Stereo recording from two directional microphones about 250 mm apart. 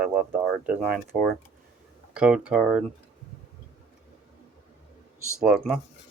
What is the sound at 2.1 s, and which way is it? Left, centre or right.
Speech, centre.